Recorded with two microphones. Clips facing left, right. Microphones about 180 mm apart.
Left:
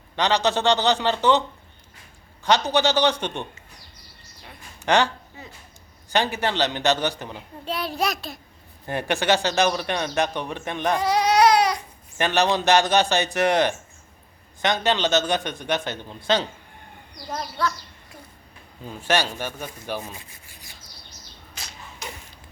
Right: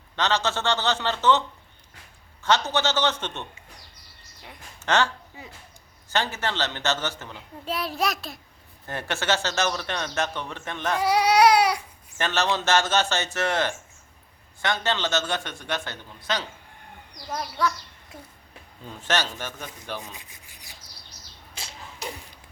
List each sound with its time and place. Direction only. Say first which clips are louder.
0.2 s speech: left 4 dB; 15° left (ahead or behind)
4.8 s speech: left 3 dB; 15° left (ahead or behind)
5.4 s speech: left 1 dB; 15° right (ahead or behind)
6.1 s speech: left 4 dB; 15° left (ahead or behind)
7.6 s a child's voice: left 1 dB; centre (ahead or behind)
8.9 s speech: left 5 dB; 15° left (ahead or behind)
11.0 s baby cry: even; 10° right (ahead or behind)
12.1 s a man's voice: left 4 dB; 15° left (ahead or behind)
17.3 s speech: even; 15° right (ahead or behind)
18.9 s speech: left 4 dB; 10° left (ahead or behind)
20.1 s rub: left 3 dB; 15° right (ahead or behind)
21.5 s a sound: right 1 dB; 30° right (ahead or behind)